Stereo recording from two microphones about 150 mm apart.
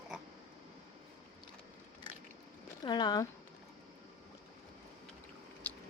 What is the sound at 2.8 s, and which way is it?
Speech, 30° left (ahead or behind).